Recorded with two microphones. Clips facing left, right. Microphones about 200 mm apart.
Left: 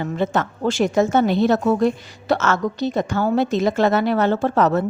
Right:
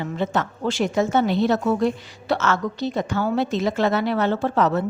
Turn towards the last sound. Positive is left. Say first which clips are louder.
# left 3 dB
turn(degrees=45)  # may be behind; listen again after turning